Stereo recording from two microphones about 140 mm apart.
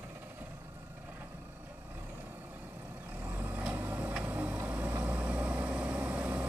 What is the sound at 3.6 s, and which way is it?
Vehicle, 10° right (ahead or behind).